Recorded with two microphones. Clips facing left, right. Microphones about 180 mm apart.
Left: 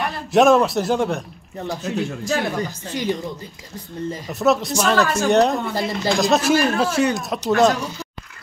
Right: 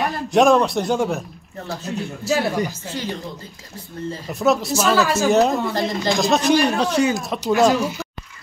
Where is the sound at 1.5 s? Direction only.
15° left (ahead or behind).